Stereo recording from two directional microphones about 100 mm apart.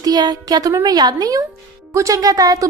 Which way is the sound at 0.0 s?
40° right (ahead or behind).